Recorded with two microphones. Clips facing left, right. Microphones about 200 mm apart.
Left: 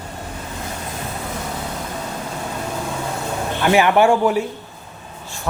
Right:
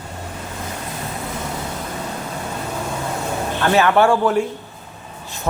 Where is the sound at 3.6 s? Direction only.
15° left (ahead or behind).